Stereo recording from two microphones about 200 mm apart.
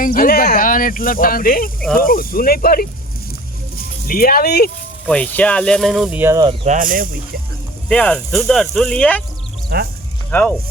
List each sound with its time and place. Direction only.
0.0 s speech: 45° left (ahead or behind)
4.0 s speech: 45° left (ahead or behind)
5.0 s speech: 5° left (ahead or behind); by 6.4 s 10° right (ahead or behind)
6.7 s speech: 45° right (ahead or behind)
7.9 s speech: 5° left (ahead or behind)
10.3 s speech: 10° left (ahead or behind)